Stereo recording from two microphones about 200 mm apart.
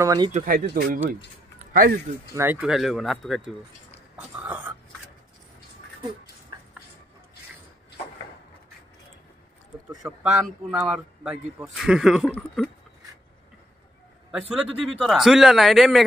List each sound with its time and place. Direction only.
0.0 s speech: 20° right (ahead or behind)
0.3 s speech: 45° right (ahead or behind)
1.6 s a sound: 45° right (ahead or behind)
2.3 s speech: 10° right (ahead or behind)
4.2 s a sound: 5° right (ahead or behind)
10.0 s speech: 10° right (ahead or behind)
14.5 s speech: centre (ahead or behind)